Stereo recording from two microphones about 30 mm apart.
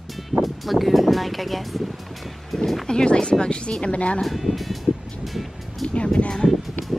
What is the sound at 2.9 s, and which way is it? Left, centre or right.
Speech, left.